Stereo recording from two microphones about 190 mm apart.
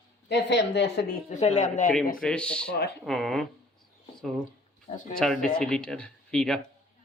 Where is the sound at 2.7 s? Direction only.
60° left (ahead or behind).